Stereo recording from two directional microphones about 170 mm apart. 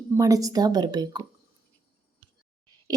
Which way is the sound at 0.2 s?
20° right (ahead or behind).